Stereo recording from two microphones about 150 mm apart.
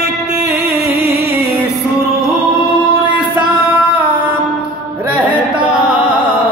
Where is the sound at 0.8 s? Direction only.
90° right.